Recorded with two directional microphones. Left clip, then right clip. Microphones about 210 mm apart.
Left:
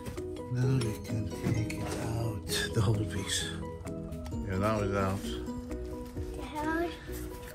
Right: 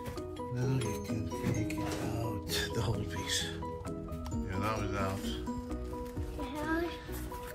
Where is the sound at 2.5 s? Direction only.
40° left (ahead or behind).